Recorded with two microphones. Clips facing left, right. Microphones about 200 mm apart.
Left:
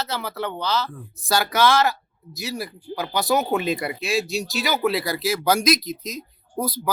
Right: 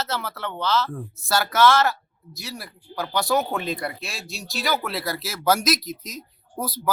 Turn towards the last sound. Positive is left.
turn(degrees=-5)  # may be behind; listen again after turning